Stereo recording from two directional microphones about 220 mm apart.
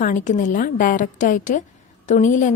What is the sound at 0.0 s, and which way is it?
A woman's voice, 35° left (ahead or behind).